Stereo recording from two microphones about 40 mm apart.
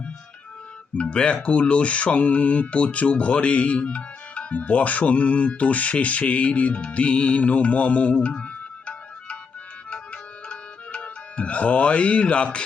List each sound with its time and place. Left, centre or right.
0.9 s speech: left
9.9 s music: left